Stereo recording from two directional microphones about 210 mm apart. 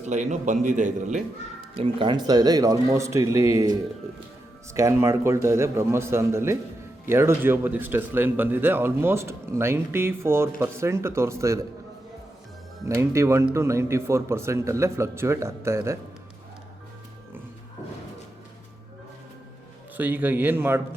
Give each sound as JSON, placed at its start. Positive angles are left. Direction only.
{"t": 0.0, "sound": "a man's voice", "side_deg": -35}
{"t": 13.0, "sound": "speech", "side_deg": -15}
{"t": 20.0, "sound": "speech", "side_deg": -10}